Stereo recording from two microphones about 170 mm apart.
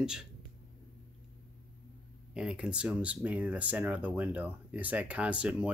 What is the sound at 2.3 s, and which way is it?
Speech, 5° right (ahead or behind).